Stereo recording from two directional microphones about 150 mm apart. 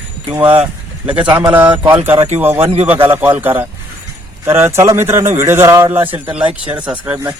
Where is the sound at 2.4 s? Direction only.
15° right (ahead or behind).